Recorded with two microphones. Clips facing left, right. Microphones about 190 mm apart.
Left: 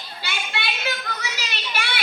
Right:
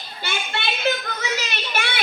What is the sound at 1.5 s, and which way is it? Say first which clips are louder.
Child singing: right 3 dB; 50° right (ahead or behind).